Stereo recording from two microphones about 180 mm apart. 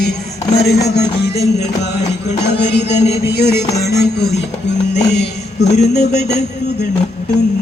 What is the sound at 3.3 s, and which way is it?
Music, 65° left (ahead or behind).